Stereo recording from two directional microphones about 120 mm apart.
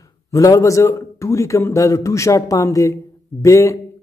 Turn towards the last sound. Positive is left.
turn(degrees=25)  # may be behind; listen again after turning